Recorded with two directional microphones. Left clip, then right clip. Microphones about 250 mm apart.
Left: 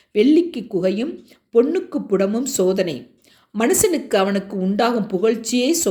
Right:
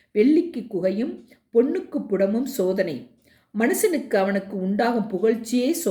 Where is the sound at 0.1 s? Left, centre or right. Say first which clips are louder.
Left 4 dB; centre.